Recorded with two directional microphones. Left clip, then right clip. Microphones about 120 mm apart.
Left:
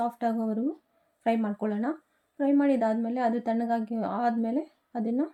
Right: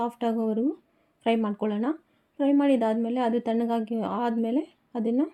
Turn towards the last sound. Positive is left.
turn(degrees=-20)  # may be behind; listen again after turning